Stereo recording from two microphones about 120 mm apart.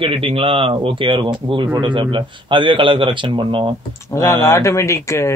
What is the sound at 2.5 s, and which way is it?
Speech, 45° right (ahead or behind).